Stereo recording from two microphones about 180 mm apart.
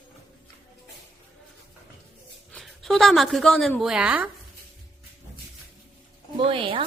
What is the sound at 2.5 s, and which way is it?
A woman's voice, centre (ahead or behind).